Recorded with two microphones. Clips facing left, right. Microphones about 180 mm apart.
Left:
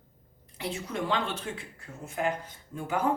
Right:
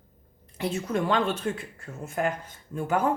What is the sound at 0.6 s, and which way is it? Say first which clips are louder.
A woman's voice: right 6 dB; 50° right (ahead or behind).